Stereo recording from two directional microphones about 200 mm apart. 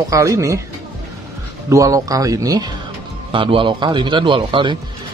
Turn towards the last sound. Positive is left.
turn(degrees=-25)  # may be behind; listen again after turning